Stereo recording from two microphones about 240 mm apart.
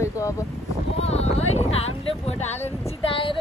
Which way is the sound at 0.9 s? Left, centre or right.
Left.